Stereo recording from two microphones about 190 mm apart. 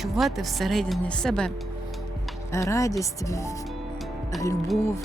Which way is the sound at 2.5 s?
15° left (ahead or behind).